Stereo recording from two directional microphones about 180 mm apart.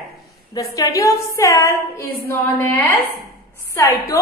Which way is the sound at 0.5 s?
20° left (ahead or behind).